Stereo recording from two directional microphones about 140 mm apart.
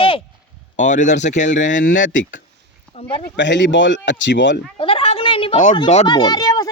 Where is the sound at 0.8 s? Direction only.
60° left (ahead or behind).